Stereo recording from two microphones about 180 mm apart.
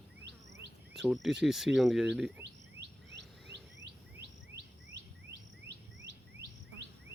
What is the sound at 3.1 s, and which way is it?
Bird, 75° right (ahead or behind).